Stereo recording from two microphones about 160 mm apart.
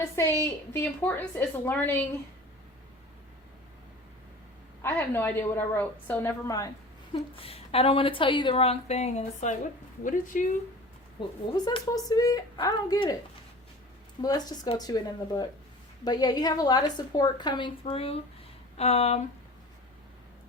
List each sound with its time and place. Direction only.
0.4 s a woman's voice: 15° left (ahead or behind)
4.8 s a woman's voice: 15° left (ahead or behind)
7.1 s a woman's voice: 35° left (ahead or behind); by 10.4 s 55° left (ahead or behind)
11.2 s a woman's voice: 30° left (ahead or behind)
14.2 s a woman's voice: 25° left (ahead or behind); by 19.2 s 40° left (ahead or behind)